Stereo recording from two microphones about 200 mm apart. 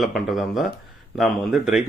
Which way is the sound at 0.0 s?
Centre (ahead or behind).